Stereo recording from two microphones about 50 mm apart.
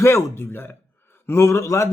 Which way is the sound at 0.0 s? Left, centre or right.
Left.